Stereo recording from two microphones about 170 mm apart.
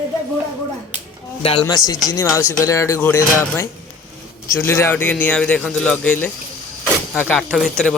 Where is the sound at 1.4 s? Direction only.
30° left (ahead or behind).